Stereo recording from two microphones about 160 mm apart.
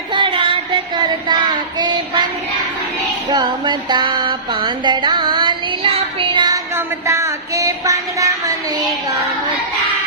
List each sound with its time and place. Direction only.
0.1 s child singing: 30° right (ahead or behind)
3.2 s music: 25° right (ahead or behind)
6.7 s a sound: 20° right (ahead or behind)